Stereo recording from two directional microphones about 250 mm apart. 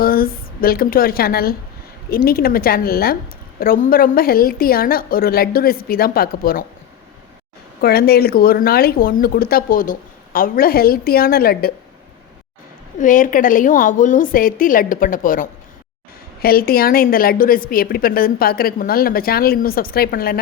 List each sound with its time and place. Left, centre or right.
0.0 s a woman's voice: left
7.8 s a woman's voice: left
13.0 s a woman's voice: left